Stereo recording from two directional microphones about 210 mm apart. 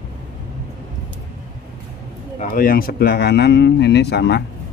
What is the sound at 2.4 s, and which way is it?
Speech, 40° left (ahead or behind).